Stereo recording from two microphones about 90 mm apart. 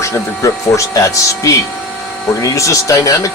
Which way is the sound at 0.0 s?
35° left (ahead or behind).